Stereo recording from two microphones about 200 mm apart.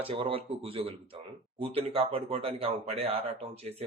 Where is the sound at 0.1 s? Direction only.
25° right (ahead or behind).